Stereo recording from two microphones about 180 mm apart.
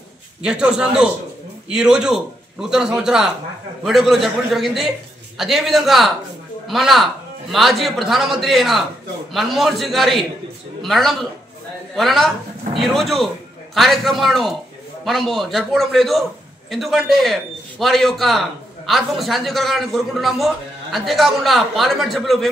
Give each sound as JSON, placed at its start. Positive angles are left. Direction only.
{"t": 0.4, "sound": "a man's voice", "side_deg": -5}